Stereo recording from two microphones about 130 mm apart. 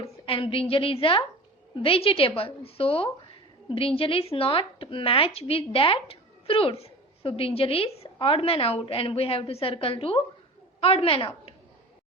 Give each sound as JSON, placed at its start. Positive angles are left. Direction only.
{"t": 0.3, "sound": "a woman's voice", "side_deg": 45}